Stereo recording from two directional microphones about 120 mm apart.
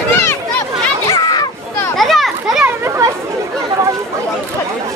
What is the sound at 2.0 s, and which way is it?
Children playing, centre (ahead or behind).